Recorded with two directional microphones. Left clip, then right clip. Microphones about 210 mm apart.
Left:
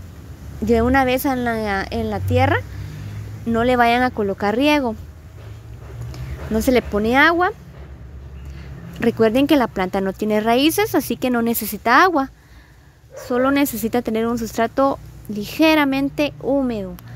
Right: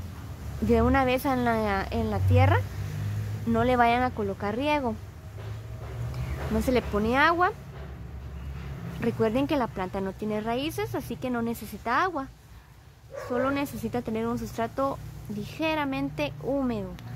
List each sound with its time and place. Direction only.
0.7 s a woman's voice: 25° left (ahead or behind)
6.1 s speech: 35° left (ahead or behind)
9.0 s speech: 35° left (ahead or behind)
13.3 s speech: 40° left (ahead or behind)